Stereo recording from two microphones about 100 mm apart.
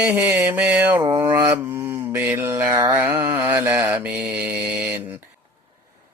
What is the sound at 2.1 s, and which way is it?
Mantra, 25° right (ahead or behind).